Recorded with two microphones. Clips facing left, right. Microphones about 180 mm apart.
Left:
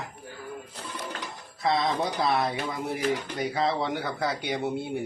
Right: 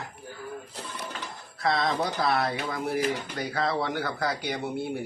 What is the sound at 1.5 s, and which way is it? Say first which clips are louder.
Speech: left 1 dB; 20° left (ahead or behind).